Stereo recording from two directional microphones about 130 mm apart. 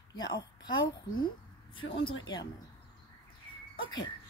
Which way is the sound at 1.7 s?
40° left (ahead or behind).